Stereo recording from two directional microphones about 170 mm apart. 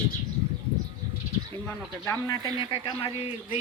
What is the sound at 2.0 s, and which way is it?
Speech, 15° left (ahead or behind).